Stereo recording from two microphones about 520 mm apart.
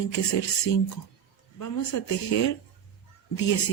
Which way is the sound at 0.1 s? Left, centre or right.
Left.